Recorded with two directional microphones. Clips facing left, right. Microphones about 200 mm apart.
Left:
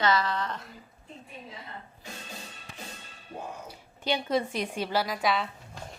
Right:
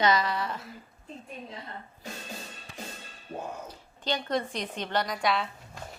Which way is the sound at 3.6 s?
10° left (ahead or behind).